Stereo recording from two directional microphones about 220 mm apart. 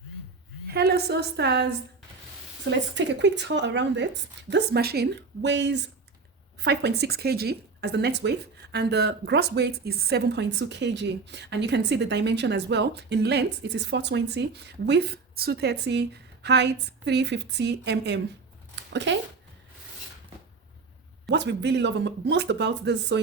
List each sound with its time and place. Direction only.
0.7 s speech: 45° right (ahead or behind)
18.8 s a sound: 55° right (ahead or behind)
21.2 s speech: 50° right (ahead or behind)